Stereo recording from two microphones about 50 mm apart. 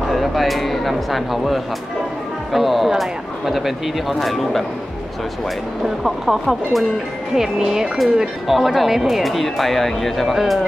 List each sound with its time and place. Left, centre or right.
0.1 s speech: centre
6.0 s speech: centre
8.2 s speech: centre